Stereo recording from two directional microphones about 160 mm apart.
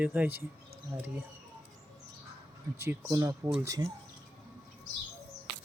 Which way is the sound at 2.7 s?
15° right (ahead or behind).